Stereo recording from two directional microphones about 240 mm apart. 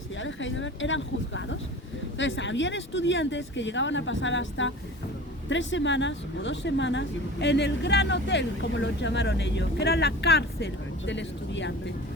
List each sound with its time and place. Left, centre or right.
0.2 s speech: left